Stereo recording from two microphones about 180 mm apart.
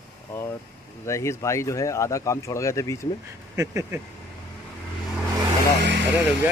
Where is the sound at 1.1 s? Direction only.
15° left (ahead or behind).